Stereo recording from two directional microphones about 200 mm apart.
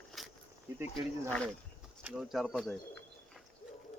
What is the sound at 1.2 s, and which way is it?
Speech, 5° left (ahead or behind).